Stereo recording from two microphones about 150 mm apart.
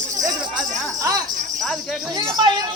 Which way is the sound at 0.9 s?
20° right (ahead or behind).